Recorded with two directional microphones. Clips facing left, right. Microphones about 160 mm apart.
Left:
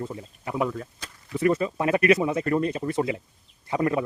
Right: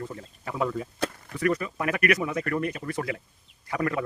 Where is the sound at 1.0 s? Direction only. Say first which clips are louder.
Right 15 dB; 60° right (ahead or behind).